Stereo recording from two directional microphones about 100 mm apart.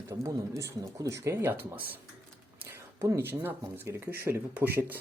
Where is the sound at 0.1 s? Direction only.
30° right (ahead or behind).